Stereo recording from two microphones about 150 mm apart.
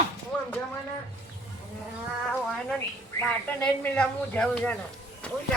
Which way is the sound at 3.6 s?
5° left (ahead or behind).